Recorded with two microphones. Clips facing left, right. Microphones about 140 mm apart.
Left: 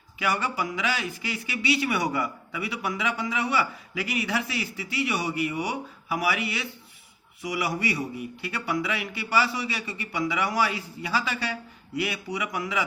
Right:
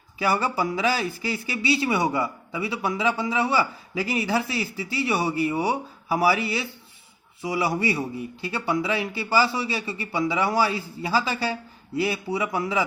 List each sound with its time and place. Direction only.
0.2 s a man's voice: 35° right (ahead or behind)